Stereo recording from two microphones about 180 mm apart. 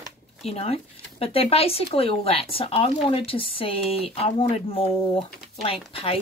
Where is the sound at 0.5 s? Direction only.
35° left (ahead or behind).